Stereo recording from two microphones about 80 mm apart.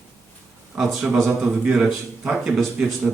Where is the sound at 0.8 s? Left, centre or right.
Centre.